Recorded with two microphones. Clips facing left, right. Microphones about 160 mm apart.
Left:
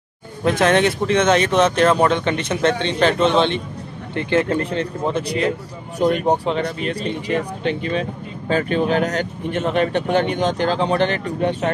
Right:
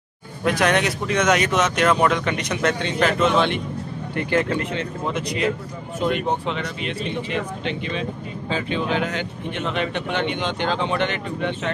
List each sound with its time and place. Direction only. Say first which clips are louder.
0.6 s speech: left 5 dB; 25° left (ahead or behind)
4.5 s speech: left 4 dB; 35° left (ahead or behind)